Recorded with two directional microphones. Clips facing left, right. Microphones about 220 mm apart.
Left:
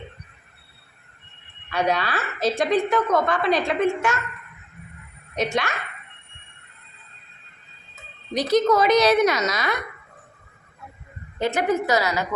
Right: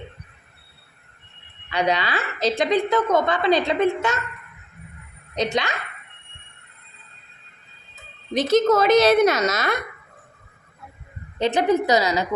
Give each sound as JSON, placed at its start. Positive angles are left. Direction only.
{"t": 1.7, "sound": "a woman's voice", "side_deg": -20}
{"t": 5.3, "sound": "speech", "side_deg": -20}
{"t": 8.3, "sound": "a woman's voice", "side_deg": -25}
{"t": 11.3, "sound": "a woman's voice", "side_deg": -20}